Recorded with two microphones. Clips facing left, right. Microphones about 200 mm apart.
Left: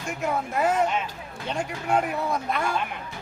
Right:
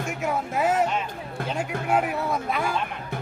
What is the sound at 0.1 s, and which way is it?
Speech, 5° right (ahead or behind).